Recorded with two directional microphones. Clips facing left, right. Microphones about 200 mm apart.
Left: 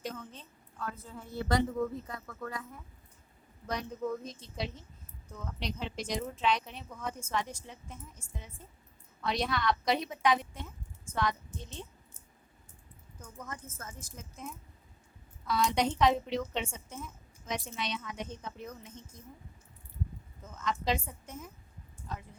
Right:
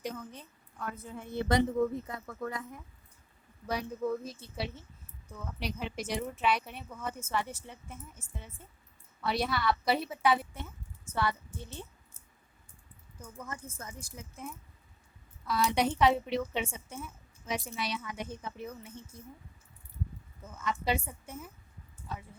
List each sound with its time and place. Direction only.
0.0 s a woman's voice: 10° right (ahead or behind)
3.7 s a woman's voice: 10° right (ahead or behind)
13.2 s speech: 10° right (ahead or behind)
20.4 s speech: 10° right (ahead or behind)
22.0 s a sound: 5° right (ahead or behind)